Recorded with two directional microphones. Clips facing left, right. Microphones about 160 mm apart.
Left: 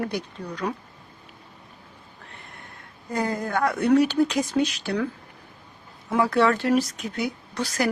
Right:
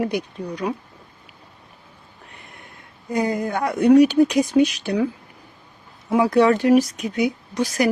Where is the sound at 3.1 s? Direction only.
15° right (ahead or behind).